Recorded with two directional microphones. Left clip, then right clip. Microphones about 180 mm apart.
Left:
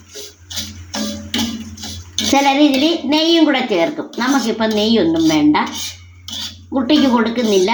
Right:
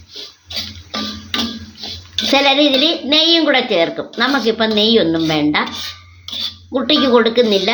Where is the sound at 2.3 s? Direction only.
30° right (ahead or behind).